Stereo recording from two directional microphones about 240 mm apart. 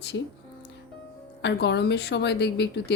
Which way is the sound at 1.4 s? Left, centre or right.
Left.